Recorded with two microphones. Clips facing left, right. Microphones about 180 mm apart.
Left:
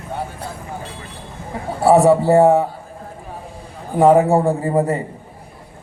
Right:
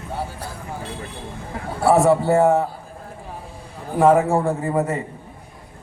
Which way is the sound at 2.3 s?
30° left (ahead or behind).